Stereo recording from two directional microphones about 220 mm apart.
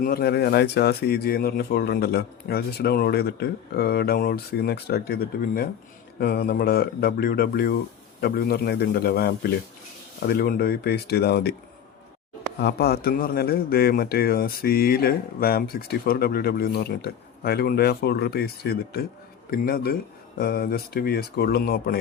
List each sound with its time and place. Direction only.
0.0 s a man's voice: 45° left (ahead or behind)
12.5 s a man's voice: 45° left (ahead or behind)